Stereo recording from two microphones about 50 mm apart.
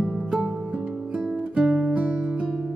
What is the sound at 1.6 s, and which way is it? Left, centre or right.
Music, centre.